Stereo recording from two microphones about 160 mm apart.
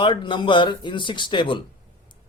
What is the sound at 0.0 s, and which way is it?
A man's voice, 30° left (ahead or behind).